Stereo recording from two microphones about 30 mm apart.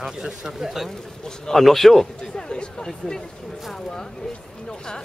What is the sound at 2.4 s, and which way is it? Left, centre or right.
Speech, left.